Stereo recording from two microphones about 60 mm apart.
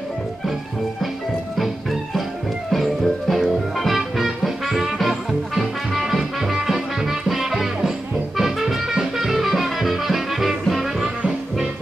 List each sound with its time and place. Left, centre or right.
1.6 s music: centre